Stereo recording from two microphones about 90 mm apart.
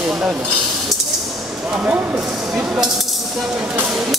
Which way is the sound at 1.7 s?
15° right (ahead or behind).